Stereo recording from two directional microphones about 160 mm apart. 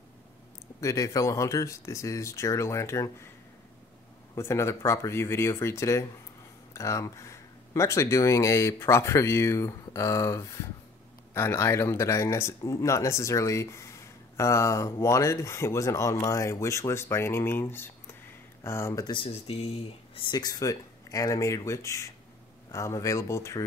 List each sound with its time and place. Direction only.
0.7 s speech: 20° left (ahead or behind)
4.4 s speech: 15° left (ahead or behind)
19.0 s speech: 35° left (ahead or behind)